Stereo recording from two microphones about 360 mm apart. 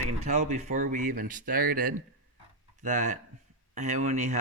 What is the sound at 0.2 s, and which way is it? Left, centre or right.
Speech, centre.